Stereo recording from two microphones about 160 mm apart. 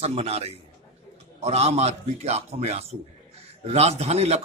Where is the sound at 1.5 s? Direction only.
40° right (ahead or behind).